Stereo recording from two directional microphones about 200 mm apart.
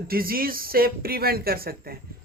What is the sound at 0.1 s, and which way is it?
Speech, 45° right (ahead or behind).